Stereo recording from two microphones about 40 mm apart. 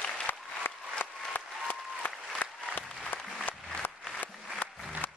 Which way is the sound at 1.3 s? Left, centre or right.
Left.